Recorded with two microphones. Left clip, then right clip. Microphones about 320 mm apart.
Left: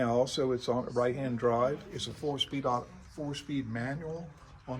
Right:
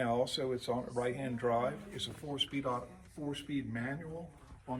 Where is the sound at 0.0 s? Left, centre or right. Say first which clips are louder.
Left 5 dB; centre.